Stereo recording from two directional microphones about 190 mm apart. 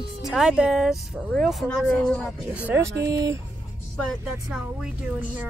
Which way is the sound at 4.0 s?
Centre (ahead or behind).